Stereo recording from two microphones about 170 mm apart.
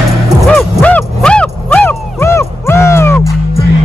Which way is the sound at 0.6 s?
10° left (ahead or behind).